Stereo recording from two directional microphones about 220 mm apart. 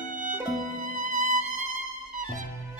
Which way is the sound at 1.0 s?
35° right (ahead or behind).